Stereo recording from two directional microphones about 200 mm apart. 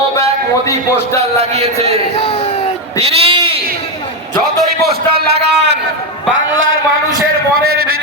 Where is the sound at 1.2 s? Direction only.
30° right (ahead or behind).